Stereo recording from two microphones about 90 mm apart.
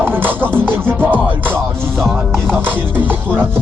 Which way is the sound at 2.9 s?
20° right (ahead or behind).